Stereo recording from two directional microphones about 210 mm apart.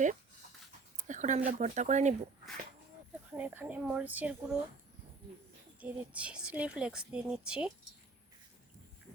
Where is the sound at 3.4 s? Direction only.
5° right (ahead or behind).